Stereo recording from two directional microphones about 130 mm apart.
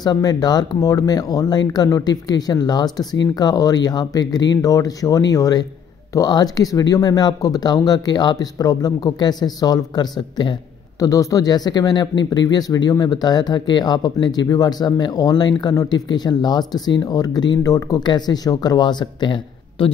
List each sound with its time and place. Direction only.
0.0 s speech: 30° left (ahead or behind)